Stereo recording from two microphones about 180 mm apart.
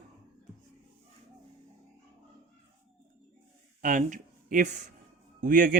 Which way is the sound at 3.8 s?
45° right (ahead or behind).